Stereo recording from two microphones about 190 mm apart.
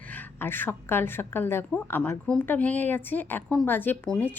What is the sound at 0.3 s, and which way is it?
A woman's voice, 10° left (ahead or behind).